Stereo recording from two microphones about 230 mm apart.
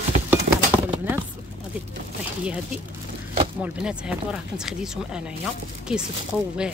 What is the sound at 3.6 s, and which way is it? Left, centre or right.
Speech, centre.